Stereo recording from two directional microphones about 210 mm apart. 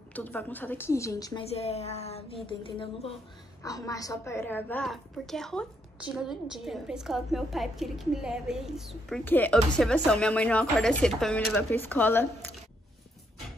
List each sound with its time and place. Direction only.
0.1 s a woman's voice: 10° left (ahead or behind)
1.5 s a woman's voice: 30° left (ahead or behind); by 12.4 s 10° left (ahead or behind)